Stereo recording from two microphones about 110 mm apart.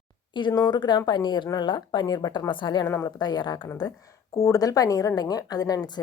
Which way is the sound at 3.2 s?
40° left (ahead or behind).